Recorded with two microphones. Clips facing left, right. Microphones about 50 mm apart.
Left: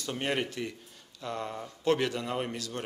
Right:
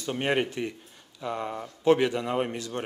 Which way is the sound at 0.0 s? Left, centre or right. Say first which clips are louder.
Right 5 dB; right.